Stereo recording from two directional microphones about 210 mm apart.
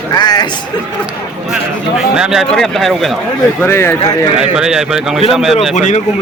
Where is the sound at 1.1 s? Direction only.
5° right (ahead or behind).